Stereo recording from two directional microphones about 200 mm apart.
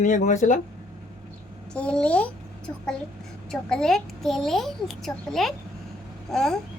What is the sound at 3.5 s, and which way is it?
A child's voice, 5° left (ahead or behind).